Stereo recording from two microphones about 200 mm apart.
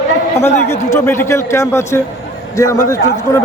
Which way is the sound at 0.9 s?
10° left (ahead or behind).